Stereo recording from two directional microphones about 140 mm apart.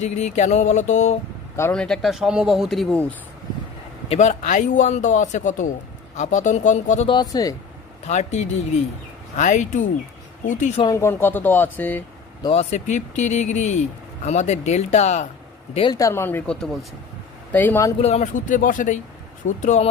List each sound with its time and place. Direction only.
0.0 s speech: 55° left (ahead or behind)
1.7 s speech: 5° left (ahead or behind)
4.1 s speech: 55° left (ahead or behind)
7.1 s speech: 30° left (ahead or behind)
8.0 s speech: 55° left (ahead or behind)
10.8 s speech: 20° left (ahead or behind)
12.5 s speech: 55° left (ahead or behind)
15.9 s speech: 25° left (ahead or behind)
17.5 s speech: 10° left (ahead or behind)
18.0 s speech: 55° left (ahead or behind)
19.5 s speech: 55° left (ahead or behind)